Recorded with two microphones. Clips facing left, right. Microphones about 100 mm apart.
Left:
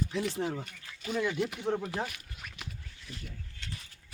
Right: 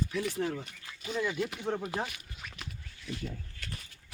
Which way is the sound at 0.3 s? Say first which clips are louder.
Even; 15° left (ahead or behind).